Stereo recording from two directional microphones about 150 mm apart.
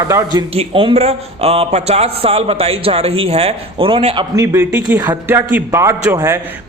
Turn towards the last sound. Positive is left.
turn(degrees=-15)  # may be behind; listen again after turning